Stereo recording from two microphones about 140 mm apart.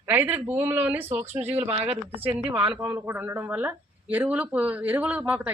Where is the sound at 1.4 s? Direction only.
50° right (ahead or behind).